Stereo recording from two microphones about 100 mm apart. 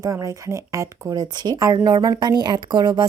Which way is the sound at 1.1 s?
45° right (ahead or behind).